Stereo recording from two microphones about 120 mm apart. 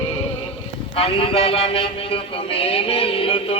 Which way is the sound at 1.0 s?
50° left (ahead or behind).